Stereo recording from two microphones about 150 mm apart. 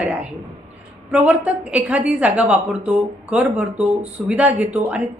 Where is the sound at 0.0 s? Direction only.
10° right (ahead or behind).